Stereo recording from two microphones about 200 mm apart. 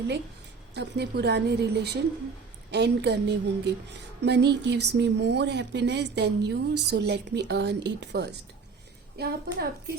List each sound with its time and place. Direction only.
0.7 s a woman's voice: 55° right (ahead or behind)